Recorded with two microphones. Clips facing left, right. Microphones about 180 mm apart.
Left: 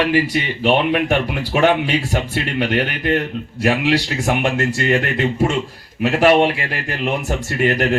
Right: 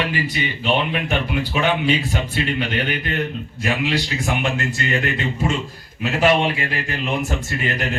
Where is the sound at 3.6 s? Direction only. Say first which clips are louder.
Left 5 dB; 75° left (ahead or behind).